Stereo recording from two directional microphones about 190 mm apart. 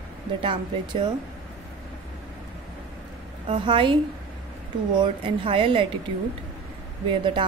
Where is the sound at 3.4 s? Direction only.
25° right (ahead or behind).